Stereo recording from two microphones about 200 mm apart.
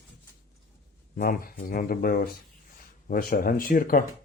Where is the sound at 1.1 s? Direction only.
45° left (ahead or behind).